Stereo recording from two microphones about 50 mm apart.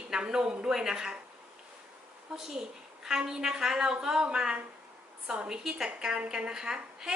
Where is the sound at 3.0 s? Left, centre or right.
Centre.